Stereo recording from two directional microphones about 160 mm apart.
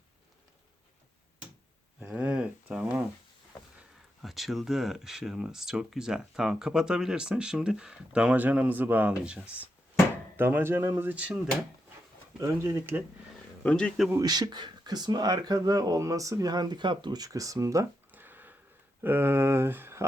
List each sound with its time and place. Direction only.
2.0 s a sound: 10° right (ahead or behind)
3.8 s speech: centre (ahead or behind)
12.4 s speech: 20° right (ahead or behind)
13.7 s speech: 5° left (ahead or behind)
14.1 s speech: 25° right (ahead or behind)